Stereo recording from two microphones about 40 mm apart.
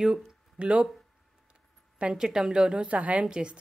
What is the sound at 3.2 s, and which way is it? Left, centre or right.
Speech, right.